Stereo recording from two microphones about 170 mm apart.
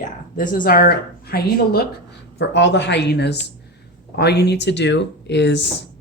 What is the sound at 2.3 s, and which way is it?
Speech, 90° left.